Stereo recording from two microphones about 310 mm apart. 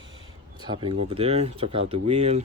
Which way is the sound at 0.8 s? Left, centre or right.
Centre.